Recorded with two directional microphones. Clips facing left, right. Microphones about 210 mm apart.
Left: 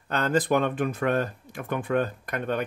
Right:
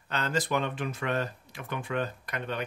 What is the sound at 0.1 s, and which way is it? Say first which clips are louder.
Speech: left 6 dB; 50° left (ahead or behind).